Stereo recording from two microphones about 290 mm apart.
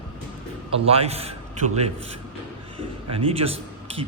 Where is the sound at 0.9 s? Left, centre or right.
Right.